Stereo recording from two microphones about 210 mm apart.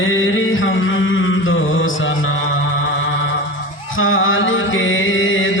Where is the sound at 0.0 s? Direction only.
65° left (ahead or behind).